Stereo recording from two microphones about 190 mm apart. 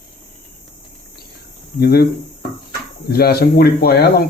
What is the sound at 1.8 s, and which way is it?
Speech, 55° left (ahead or behind).